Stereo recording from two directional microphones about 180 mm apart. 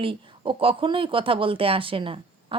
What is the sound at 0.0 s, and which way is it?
Speech, 30° right (ahead or behind).